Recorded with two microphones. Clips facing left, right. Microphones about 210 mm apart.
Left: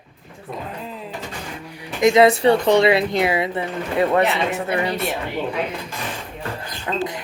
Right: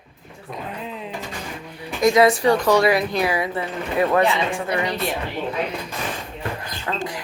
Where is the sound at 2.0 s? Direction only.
25° left (ahead or behind).